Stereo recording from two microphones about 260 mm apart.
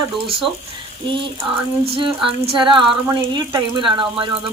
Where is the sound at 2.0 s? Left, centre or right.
Centre.